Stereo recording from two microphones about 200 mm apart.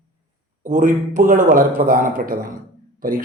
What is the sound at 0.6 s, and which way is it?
A man's voice, 40° right (ahead or behind).